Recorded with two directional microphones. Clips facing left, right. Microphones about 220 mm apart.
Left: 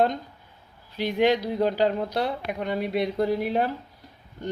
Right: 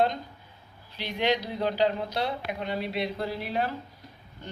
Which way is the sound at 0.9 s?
50° left (ahead or behind).